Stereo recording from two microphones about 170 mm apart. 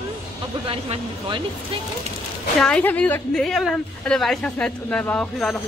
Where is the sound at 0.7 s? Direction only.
30° right (ahead or behind).